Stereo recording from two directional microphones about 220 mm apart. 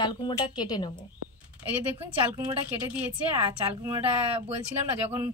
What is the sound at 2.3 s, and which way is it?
A woman's voice, 10° right (ahead or behind).